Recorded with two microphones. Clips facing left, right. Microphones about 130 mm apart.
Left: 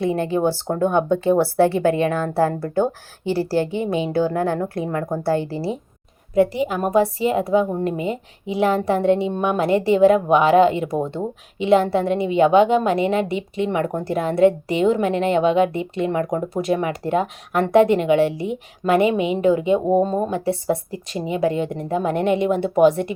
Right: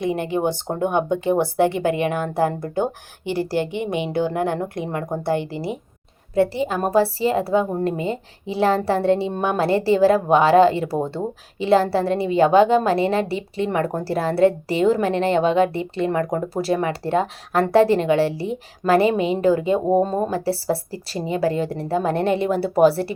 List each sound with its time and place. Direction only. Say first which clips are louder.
0.0 s a woman's voice: left 2 dB; 20° right (ahead or behind)
6.3 s a woman's voice: left 1 dB; 30° right (ahead or behind)